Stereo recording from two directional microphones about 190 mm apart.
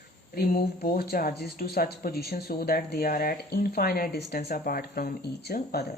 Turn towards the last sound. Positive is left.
turn(degrees=55)  # may be behind; listen again after turning